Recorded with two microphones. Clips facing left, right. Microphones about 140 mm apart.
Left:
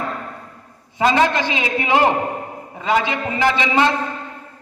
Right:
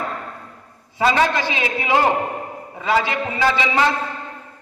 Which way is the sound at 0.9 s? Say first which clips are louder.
Left 1 dB; 20° left (ahead or behind).